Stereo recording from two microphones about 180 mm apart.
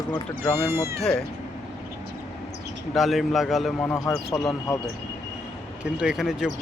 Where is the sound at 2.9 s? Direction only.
Centre (ahead or behind).